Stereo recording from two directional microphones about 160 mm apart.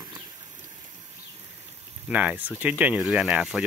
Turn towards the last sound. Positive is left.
turn(degrees=-5)  # may be behind; listen again after turning